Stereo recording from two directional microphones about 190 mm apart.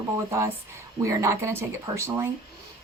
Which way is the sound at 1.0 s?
15° right (ahead or behind).